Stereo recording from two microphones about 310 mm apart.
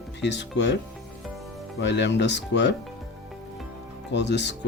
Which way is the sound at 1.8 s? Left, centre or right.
Left.